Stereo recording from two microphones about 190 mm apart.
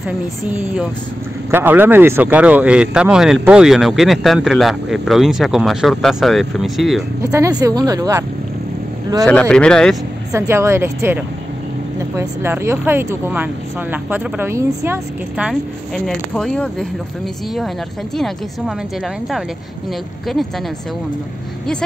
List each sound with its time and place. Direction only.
0.5 s speech: 10° right (ahead or behind)
7.2 s speech: 15° right (ahead or behind)
9.2 s speech: 5° left (ahead or behind)
10.3 s speech: 15° right (ahead or behind); by 16.8 s 5° left (ahead or behind)